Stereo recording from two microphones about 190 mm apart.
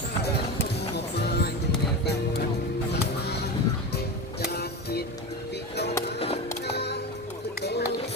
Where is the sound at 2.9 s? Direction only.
60° left (ahead or behind).